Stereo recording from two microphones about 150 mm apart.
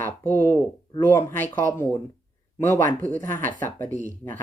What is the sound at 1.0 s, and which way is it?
Speech, 15° left (ahead or behind).